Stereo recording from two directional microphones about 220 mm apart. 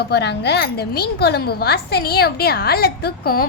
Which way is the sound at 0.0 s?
50° left (ahead or behind).